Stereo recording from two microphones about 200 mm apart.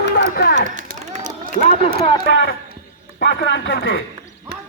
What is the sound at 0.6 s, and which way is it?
Run, 40° right (ahead or behind).